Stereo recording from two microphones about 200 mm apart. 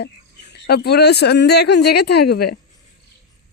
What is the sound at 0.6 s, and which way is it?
Speech, 55° left (ahead or behind).